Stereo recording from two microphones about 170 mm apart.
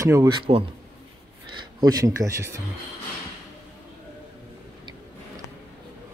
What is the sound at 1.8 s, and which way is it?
Speech, 20° right (ahead or behind).